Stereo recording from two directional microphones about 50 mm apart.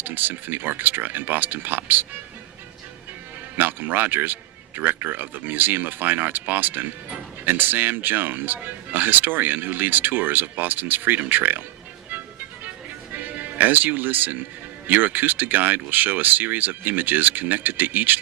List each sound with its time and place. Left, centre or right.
0.0 s speech: right
3.6 s speech: right
12.1 s music: right
13.1 s speech: right